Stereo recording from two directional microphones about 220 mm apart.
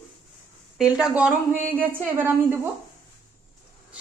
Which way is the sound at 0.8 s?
5° right (ahead or behind).